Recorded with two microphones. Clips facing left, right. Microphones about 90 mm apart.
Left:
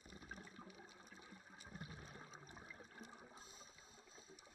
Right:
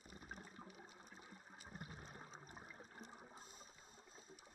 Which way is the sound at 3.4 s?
45° right (ahead or behind).